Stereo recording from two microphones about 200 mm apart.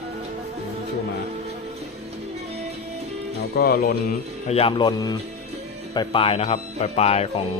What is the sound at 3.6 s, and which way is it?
Speech, 50° left (ahead or behind).